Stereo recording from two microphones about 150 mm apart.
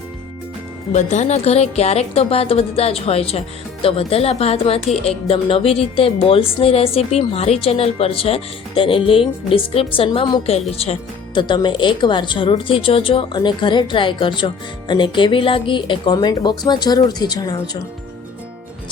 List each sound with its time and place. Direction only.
0.9 s a woman's voice: 50° left (ahead or behind)
11.3 s a woman's voice: 30° left (ahead or behind)